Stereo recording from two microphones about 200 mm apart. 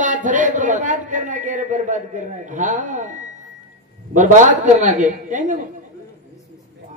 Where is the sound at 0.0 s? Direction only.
40° right (ahead or behind).